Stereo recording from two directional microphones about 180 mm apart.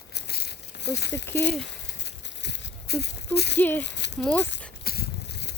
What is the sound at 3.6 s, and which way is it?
Speech, 10° left (ahead or behind).